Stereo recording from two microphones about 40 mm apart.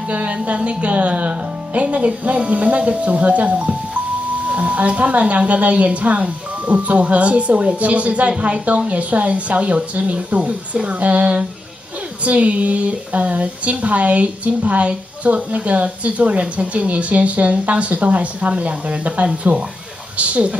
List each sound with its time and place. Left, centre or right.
0.1 s speech: right